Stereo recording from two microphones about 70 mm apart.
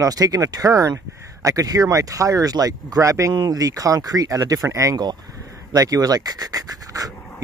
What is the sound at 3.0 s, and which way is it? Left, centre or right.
Speech, right.